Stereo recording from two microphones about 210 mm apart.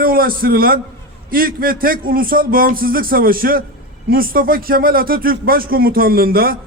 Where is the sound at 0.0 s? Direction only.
45° right (ahead or behind).